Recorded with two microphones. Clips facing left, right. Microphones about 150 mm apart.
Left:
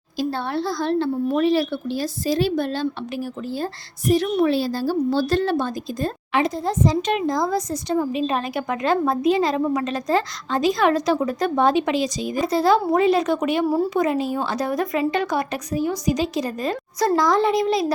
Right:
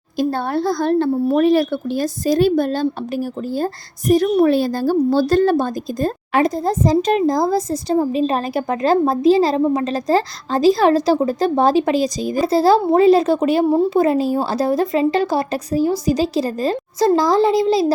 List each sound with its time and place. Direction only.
0.2 s a woman's voice: 45° right (ahead or behind); by 17.9 s 30° right (ahead or behind)